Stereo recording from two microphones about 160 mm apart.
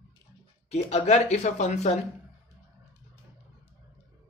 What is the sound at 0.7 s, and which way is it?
Speech, 45° left (ahead or behind).